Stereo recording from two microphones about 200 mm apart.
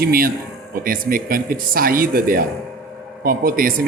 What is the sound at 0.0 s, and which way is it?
Speech, 45° right (ahead or behind).